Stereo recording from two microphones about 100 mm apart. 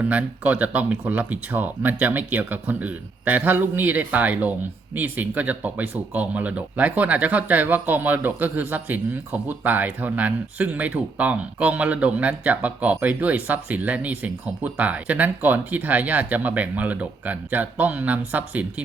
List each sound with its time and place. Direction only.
0.0 s speech: 15° right (ahead or behind)